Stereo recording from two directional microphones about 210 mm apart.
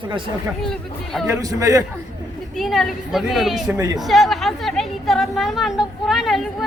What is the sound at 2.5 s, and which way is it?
A woman's voice, centre (ahead or behind).